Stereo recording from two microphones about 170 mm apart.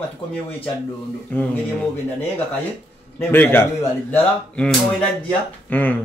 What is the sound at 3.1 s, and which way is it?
Speech, 10° left (ahead or behind).